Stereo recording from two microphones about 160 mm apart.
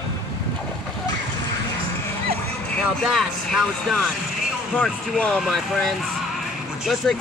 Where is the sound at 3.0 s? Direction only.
Centre (ahead or behind).